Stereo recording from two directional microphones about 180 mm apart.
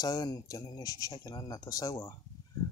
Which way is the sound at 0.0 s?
20° left (ahead or behind).